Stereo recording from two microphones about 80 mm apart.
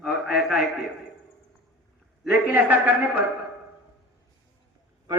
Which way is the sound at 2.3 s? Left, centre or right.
Right.